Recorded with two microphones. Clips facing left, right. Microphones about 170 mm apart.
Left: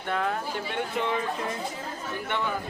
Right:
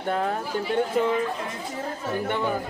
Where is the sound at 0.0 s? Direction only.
35° right (ahead or behind).